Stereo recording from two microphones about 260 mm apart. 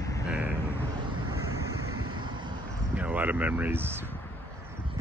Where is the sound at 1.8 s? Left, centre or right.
Right.